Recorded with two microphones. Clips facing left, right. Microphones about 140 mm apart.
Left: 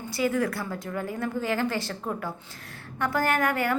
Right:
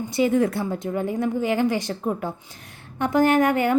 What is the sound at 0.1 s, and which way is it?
A woman's voice, 20° right (ahead or behind).